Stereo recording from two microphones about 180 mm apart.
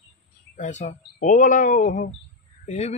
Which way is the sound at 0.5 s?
40° left (ahead or behind).